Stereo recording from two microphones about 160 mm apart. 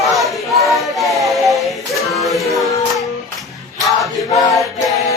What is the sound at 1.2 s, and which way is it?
Music, centre (ahead or behind).